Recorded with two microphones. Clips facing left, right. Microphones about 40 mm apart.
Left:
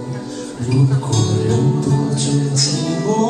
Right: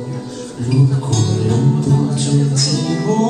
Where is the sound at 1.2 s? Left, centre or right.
Centre.